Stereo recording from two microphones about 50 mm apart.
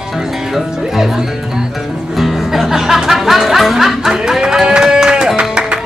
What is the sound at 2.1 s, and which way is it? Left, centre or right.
Music, centre.